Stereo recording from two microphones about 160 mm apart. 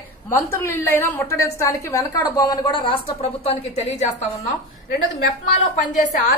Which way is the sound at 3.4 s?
40° left (ahead or behind).